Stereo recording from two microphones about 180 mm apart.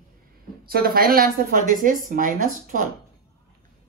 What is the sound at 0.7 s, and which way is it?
Speech, 55° right (ahead or behind).